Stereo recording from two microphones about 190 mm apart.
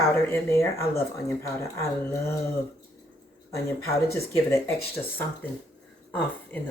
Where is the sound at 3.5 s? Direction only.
15° left (ahead or behind).